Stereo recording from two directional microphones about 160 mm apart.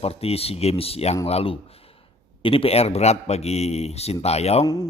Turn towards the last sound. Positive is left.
turn(degrees=25)  # may be behind; listen again after turning